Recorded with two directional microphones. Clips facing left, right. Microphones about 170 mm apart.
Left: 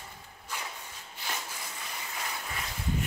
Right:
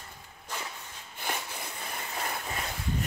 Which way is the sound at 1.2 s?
55° right (ahead or behind).